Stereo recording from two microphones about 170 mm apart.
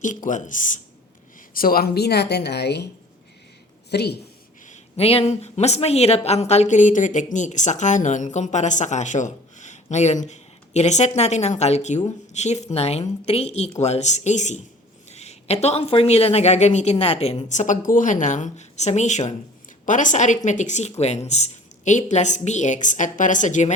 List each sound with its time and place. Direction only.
0.0 s a woman's voice: 50° left (ahead or behind); by 2.8 s 75° left (ahead or behind)
3.9 s speech: 70° left (ahead or behind)
4.6 s a woman's voice: 40° left (ahead or behind)